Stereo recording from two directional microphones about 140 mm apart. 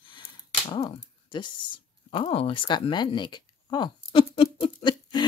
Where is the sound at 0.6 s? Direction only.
40° left (ahead or behind).